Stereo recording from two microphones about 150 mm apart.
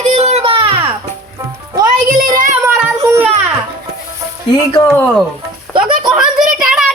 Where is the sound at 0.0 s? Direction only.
45° right (ahead or behind).